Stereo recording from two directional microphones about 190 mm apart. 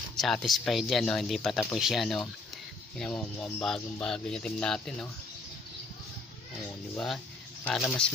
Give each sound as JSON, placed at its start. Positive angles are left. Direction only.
{"t": 0.1, "sound": "speech", "side_deg": 0}
{"t": 7.6, "sound": "speech", "side_deg": 0}